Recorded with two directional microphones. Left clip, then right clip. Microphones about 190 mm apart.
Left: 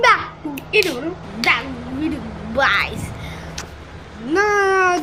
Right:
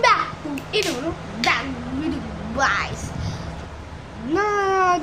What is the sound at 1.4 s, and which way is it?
Speech, 35° left (ahead or behind).